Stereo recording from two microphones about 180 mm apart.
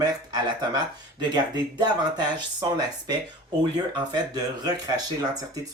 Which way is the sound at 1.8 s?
25° right (ahead or behind).